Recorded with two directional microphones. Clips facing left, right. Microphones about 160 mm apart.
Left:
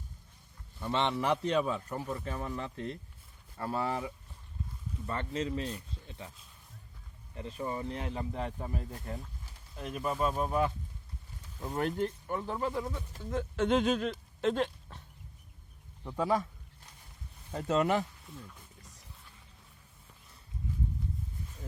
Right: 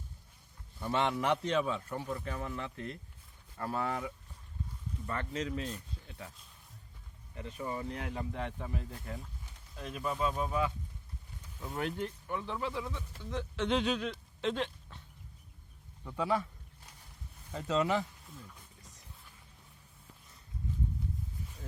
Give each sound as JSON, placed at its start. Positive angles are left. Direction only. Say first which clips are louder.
{"t": 0.8, "sound": "a man's voice", "louder": "left 1 dB", "side_deg": -5}
{"t": 1.5, "sound": "speech", "louder": "left 2 dB", "side_deg": 40}
{"t": 2.0, "sound": "speech", "louder": "left 1 dB", "side_deg": 30}
{"t": 6.1, "sound": "a sound", "louder": "left 2 dB", "side_deg": 25}
{"t": 7.3, "sound": "speech", "louder": "left 2 dB", "side_deg": 30}
{"t": 16.1, "sound": "speech", "louder": "left 2 dB", "side_deg": 40}
{"t": 17.5, "sound": "speech", "louder": "left 2 dB", "side_deg": 55}